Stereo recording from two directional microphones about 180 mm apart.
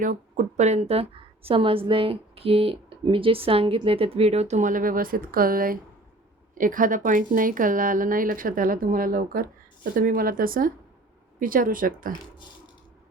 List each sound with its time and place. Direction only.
0.0 s a woman's voice: 45° right (ahead or behind)